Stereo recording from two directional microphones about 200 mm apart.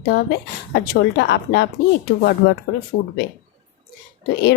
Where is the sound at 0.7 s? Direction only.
60° left (ahead or behind).